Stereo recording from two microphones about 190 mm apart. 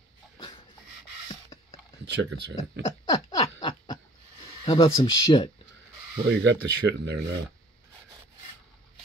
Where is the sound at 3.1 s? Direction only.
20° left (ahead or behind).